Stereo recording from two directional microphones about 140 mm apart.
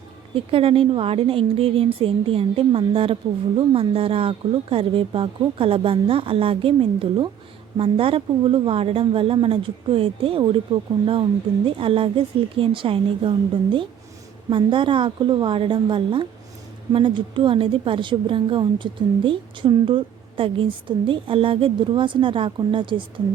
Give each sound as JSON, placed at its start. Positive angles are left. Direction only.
{"t": 0.3, "sound": "a woman's voice", "side_deg": -40}